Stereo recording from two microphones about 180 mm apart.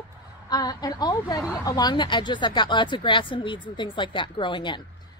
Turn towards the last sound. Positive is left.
turn(degrees=25)  # may be behind; listen again after turning